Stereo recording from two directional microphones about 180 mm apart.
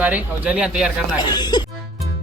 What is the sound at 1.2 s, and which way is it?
Speech, 25° left (ahead or behind).